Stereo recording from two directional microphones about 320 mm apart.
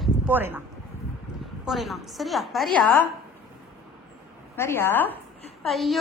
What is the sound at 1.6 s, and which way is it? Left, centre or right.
A woman's voice, centre.